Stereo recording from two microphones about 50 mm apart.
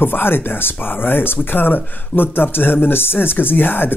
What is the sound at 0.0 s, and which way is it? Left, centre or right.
Speech, left.